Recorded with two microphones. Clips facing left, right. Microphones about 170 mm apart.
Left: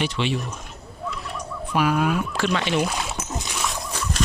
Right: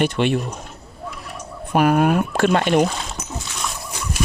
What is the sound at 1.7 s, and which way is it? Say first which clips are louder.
Speech: right 5 dB; 50° right (ahead or behind).